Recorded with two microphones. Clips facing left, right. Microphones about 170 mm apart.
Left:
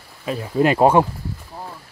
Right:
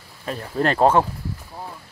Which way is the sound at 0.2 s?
10° left (ahead or behind).